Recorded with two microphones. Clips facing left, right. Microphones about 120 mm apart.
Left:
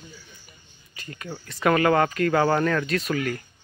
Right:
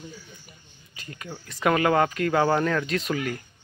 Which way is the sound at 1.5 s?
10° right (ahead or behind).